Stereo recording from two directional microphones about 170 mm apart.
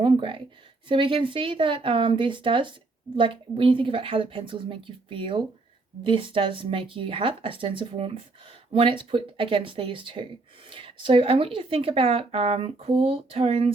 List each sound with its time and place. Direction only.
0.0 s speech: 30° right (ahead or behind)